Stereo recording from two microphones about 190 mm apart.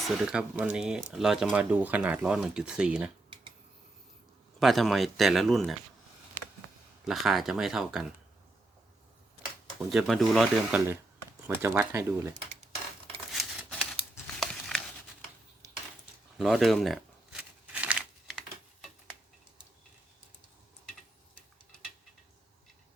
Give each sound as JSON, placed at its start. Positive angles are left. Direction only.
{"t": 0.0, "sound": "speech", "side_deg": 0}
{"t": 4.6, "sound": "speech", "side_deg": 0}
{"t": 7.1, "sound": "speech", "side_deg": 0}
{"t": 9.7, "sound": "speech", "side_deg": 0}
{"t": 11.4, "sound": "speech", "side_deg": -10}
{"t": 13.3, "sound": "a sound", "side_deg": 0}
{"t": 16.4, "sound": "shuffling cards", "side_deg": 0}